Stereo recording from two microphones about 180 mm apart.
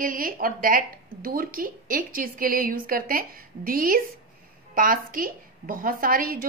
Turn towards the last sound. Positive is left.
turn(degrees=-50)  # may be behind; listen again after turning